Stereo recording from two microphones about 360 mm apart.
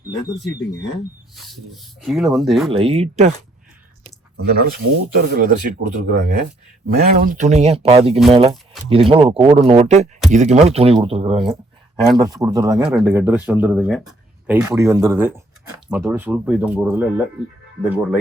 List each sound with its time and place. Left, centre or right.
1.4 s speech: centre
2.6 s speech: centre
4.4 s speech: right; by 18.2 s centre